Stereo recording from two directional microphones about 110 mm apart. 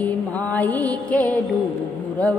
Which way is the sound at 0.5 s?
15° left (ahead or behind).